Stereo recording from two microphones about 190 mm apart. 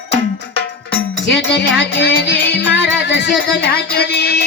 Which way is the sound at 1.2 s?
65° left (ahead or behind).